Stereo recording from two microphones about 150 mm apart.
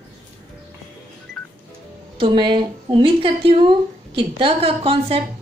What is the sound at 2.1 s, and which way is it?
A woman's voice, 30° right (ahead or behind).